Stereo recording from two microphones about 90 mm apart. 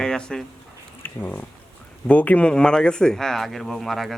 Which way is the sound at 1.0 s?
20° left (ahead or behind).